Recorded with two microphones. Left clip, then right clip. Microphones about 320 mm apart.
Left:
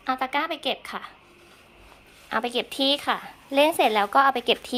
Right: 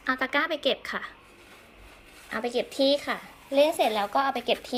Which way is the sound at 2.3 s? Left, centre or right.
Centre.